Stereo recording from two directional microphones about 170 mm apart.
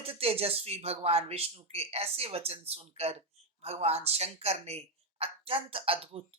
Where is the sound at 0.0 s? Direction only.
35° right (ahead or behind).